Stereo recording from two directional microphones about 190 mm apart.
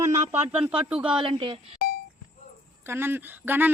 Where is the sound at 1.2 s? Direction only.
25° right (ahead or behind).